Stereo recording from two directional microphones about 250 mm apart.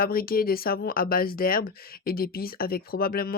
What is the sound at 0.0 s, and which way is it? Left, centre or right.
Speech, left.